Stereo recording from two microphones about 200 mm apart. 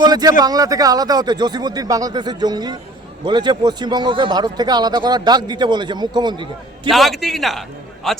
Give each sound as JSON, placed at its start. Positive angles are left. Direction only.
{"t": 0.0, "sound": "a man's voice", "side_deg": -20}
{"t": 6.9, "sound": "a man's voice", "side_deg": 0}